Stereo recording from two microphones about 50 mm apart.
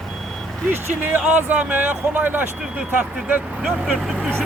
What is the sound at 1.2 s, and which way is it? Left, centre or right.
Speech, right.